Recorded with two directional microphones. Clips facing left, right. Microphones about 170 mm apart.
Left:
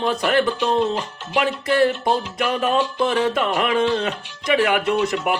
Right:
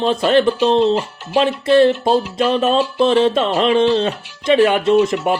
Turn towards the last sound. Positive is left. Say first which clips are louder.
# right 6 dB
turn(degrees=-25)  # may be behind; listen again after turning